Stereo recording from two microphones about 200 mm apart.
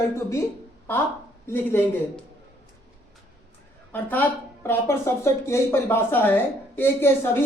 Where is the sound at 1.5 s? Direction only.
10° left (ahead or behind).